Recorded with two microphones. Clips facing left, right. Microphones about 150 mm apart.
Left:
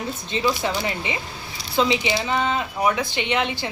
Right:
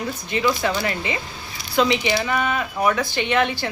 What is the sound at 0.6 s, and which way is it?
Speech, 20° left (ahead or behind).